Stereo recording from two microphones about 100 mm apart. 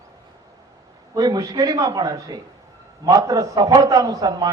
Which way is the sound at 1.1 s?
40° right (ahead or behind).